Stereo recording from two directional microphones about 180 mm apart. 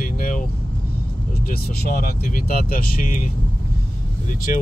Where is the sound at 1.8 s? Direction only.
55° left (ahead or behind).